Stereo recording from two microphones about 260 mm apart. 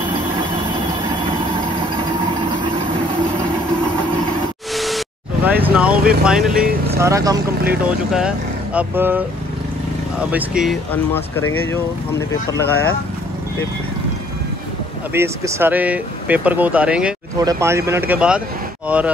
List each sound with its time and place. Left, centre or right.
4.7 s a sound: centre
6.2 s speech: centre
10.6 s speech: centre
15.1 s speech: centre